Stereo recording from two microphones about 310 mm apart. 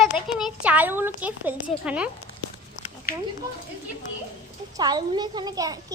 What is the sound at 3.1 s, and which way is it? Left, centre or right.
Speech, left.